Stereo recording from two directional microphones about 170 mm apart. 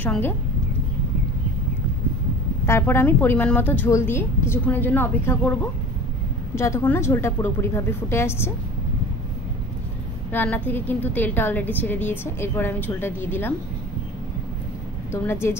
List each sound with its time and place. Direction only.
0.0 s a woman's voice: 10° left (ahead or behind)
2.6 s a woman's voice: 15° left (ahead or behind)
10.3 s a woman's voice: 10° left (ahead or behind)